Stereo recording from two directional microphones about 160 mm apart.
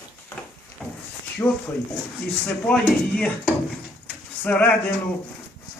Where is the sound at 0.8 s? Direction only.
Centre (ahead or behind).